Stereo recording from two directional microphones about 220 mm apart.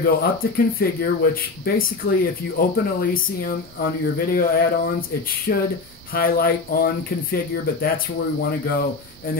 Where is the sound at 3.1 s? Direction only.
40° left (ahead or behind).